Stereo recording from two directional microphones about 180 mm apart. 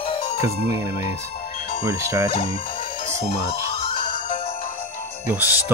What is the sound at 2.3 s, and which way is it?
Speech, 35° left (ahead or behind).